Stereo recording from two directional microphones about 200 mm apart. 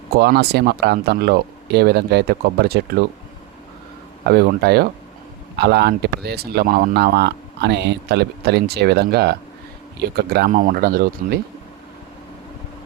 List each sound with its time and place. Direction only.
0.1 s speech: 50° right (ahead or behind)
4.3 s speech: 50° right (ahead or behind)